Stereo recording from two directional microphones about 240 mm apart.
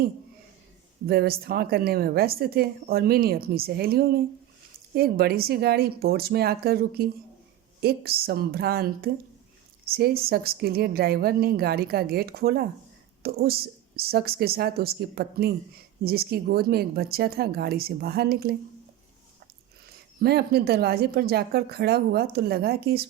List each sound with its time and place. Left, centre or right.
1.0 s a woman's voice: right
20.2 s a woman's voice: right